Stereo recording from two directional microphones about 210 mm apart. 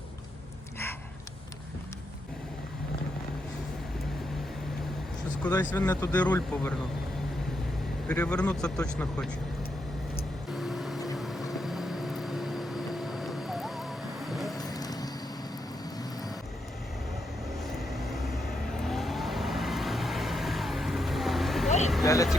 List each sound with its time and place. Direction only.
5.4 s speech: 10° left (ahead or behind)
8.0 s speech: 5° left (ahead or behind)
10.5 s vehicle: centre (ahead or behind)
14.6 s vehicle: 20° left (ahead or behind)
17.7 s vehicle: centre (ahead or behind)
22.0 s vehicle: 15° left (ahead or behind)